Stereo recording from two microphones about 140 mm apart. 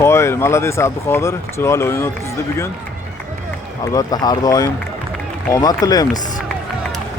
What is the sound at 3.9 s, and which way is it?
Speech, 30° left (ahead or behind).